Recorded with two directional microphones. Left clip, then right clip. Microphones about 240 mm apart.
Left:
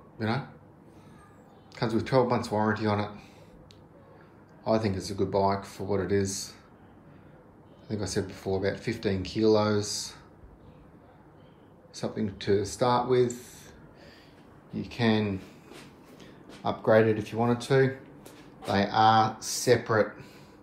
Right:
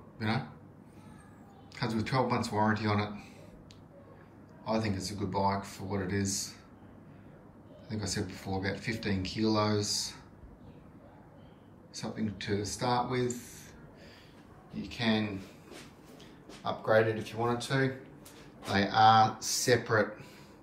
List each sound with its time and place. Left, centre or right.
0.2 s speech: centre
1.8 s speech: centre
4.6 s speech: centre
7.9 s speech: centre
11.9 s speech: centre
14.8 s speech: left
16.6 s speech: left
18.6 s speech: centre